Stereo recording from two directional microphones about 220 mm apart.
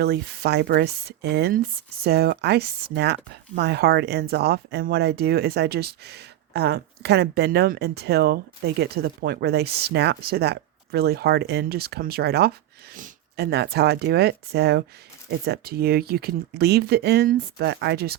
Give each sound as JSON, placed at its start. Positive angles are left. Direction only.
{"t": 0.0, "sound": "speech", "side_deg": -45}